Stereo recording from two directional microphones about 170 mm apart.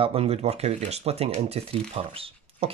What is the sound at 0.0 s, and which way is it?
Speech, 35° right (ahead or behind).